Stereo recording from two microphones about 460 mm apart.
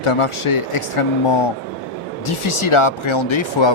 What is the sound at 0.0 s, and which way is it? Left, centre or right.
Speech, left.